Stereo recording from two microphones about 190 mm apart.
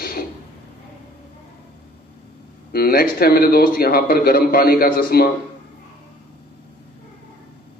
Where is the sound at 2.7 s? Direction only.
55° left (ahead or behind).